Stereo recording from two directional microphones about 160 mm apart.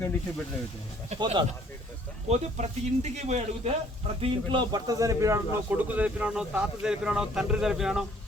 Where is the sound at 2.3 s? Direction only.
45° right (ahead or behind).